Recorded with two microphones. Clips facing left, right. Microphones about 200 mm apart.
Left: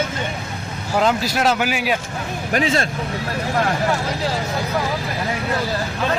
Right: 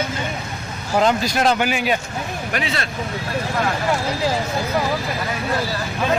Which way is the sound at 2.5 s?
40° left (ahead or behind).